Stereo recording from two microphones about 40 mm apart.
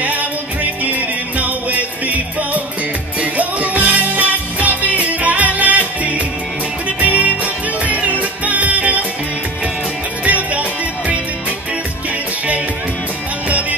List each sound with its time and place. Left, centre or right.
0.0 s music: right
10.2 s music: right
13.5 s music: right